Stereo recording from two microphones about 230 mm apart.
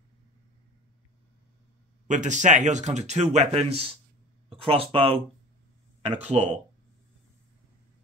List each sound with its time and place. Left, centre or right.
2.0 s speech: right
6.2 s speech: right